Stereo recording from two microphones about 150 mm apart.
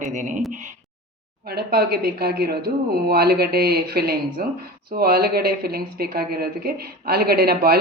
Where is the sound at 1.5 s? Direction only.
90° right.